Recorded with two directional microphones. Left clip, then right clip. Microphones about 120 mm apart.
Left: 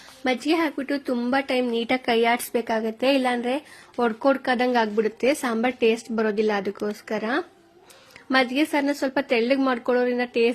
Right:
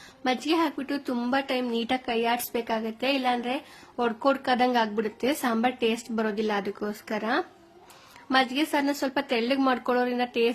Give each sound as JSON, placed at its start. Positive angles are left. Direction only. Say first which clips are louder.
{"t": 0.3, "sound": "speech", "louder": "left 2 dB", "side_deg": 20}
{"t": 2.2, "sound": "speech", "louder": "left 5 dB", "side_deg": 35}
{"t": 4.2, "sound": "speech", "louder": "left 1 dB", "side_deg": 20}